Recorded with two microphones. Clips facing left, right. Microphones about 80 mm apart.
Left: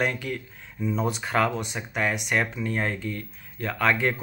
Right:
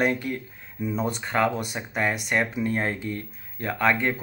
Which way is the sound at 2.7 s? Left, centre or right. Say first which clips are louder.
Right 1 dB; centre.